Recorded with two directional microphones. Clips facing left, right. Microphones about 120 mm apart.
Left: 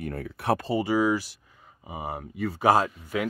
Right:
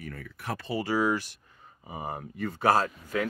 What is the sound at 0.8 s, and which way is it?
Speech, 10° left (ahead or behind).